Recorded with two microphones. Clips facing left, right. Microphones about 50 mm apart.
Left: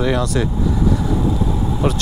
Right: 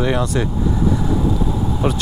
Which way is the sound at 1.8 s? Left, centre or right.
Centre.